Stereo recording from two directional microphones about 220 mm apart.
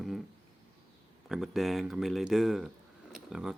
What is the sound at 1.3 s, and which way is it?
Speech, centre (ahead or behind).